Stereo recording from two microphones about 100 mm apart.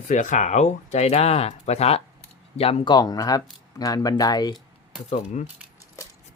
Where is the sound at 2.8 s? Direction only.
45° left (ahead or behind).